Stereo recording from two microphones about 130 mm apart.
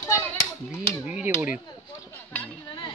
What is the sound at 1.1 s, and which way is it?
Speech, 10° right (ahead or behind).